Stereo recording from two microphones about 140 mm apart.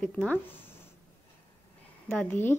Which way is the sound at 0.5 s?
15° left (ahead or behind).